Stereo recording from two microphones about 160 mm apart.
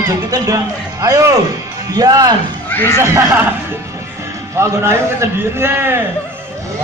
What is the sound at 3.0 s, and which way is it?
Speech, 15° right (ahead or behind).